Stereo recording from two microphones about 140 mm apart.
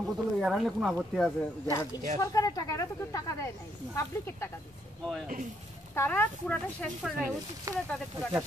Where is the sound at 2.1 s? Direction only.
25° left (ahead or behind).